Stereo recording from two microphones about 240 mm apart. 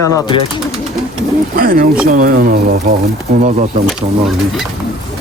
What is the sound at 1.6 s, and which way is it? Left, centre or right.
Speech, right.